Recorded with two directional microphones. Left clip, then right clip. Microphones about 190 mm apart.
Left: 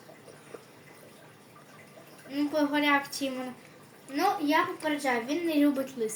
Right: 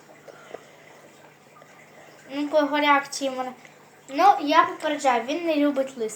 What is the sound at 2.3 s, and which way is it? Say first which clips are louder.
A woman's voice: right 6 dB; 20° left (ahead or behind).